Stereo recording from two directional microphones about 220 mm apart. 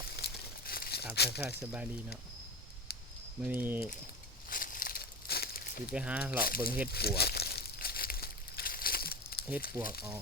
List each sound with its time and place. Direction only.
0.2 s crumpling: 45° left (ahead or behind)
1.1 s speech: 45° left (ahead or behind)
1.5 s speech: 10° right (ahead or behind)
3.4 s speech: 10° right (ahead or behind)
4.4 s a sound: 40° left (ahead or behind)
5.9 s speech: 5° right (ahead or behind)
6.4 s speech: 40° left (ahead or behind)
6.9 s crumpling: 45° left (ahead or behind)